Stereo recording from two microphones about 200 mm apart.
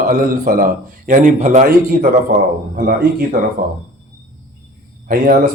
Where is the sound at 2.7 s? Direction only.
50° right (ahead or behind).